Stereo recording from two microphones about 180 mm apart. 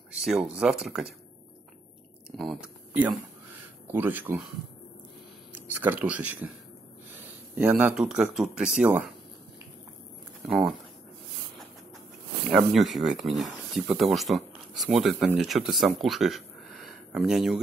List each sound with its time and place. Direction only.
0.2 s speech: 5° right (ahead or behind)
2.3 s speech: 5° right (ahead or behind)
5.5 s speech: 10° right (ahead or behind)
7.5 s speech: 10° right (ahead or behind)
10.4 s speech: centre (ahead or behind)
12.4 s speech: centre (ahead or behind)